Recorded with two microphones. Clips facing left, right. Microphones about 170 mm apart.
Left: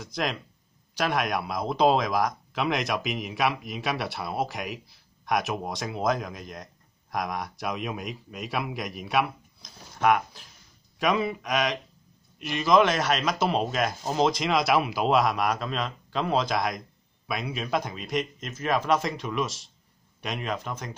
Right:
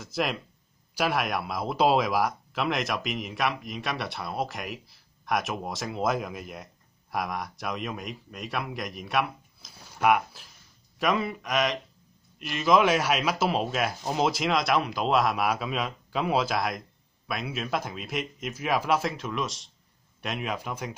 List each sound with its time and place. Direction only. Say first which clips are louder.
0.0 s a man's voice: right 1 dB; 5° right (ahead or behind)